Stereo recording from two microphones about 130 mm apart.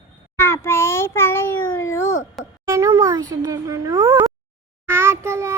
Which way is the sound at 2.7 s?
20° right (ahead or behind).